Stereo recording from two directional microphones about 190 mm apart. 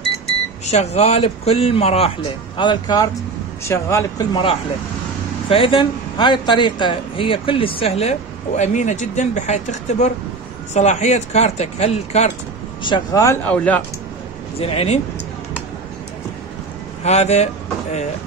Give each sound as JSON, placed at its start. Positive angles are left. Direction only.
{"t": 0.7, "sound": "speech", "side_deg": 35}
{"t": 12.8, "sound": "speech", "side_deg": 20}
{"t": 14.6, "sound": "speech", "side_deg": 30}
{"t": 17.0, "sound": "speech", "side_deg": 35}